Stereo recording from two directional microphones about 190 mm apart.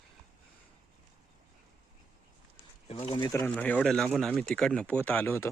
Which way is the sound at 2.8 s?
30° left (ahead or behind).